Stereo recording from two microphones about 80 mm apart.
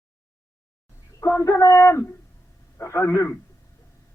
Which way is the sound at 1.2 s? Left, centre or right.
Left.